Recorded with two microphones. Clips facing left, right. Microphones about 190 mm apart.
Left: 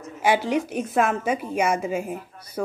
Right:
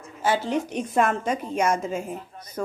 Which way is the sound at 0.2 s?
15° left (ahead or behind).